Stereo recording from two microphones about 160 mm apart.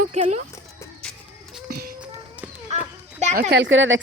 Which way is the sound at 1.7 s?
70° right (ahead or behind).